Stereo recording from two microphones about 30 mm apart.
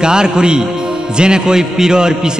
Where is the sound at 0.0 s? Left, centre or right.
Right.